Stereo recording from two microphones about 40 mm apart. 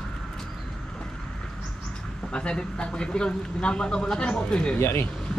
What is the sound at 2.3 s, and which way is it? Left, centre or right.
Speech, left.